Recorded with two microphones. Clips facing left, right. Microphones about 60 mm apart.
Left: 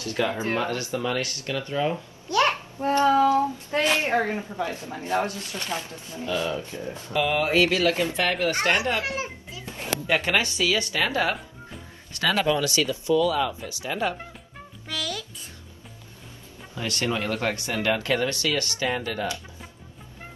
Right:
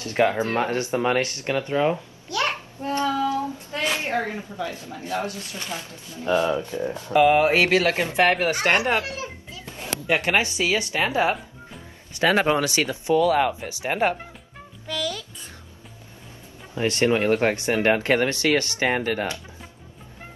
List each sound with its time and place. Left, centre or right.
0.0 s speech: right
2.3 s speech: left
2.8 s child singing: left
4.0 s speech: left
6.2 s speech: right
10.0 s speech: centre
13.1 s speech: right
14.9 s music: centre
16.7 s speech: right
18.9 s speech: right